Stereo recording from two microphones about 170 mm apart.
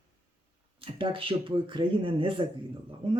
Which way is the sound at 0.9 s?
30° right (ahead or behind).